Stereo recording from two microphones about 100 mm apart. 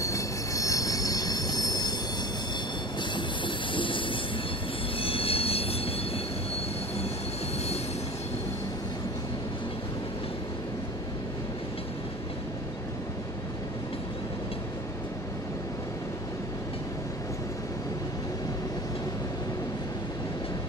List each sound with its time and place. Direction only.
0.0 s train wheels squealing: 35° left (ahead or behind)
3.0 s train: 55° left (ahead or behind)
5.0 s train wheels squealing: 70° left (ahead or behind)